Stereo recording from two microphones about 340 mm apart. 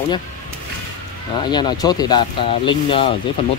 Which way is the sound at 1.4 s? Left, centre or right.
Centre.